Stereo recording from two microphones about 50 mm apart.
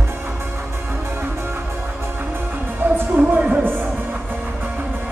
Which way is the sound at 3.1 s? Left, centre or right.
Right.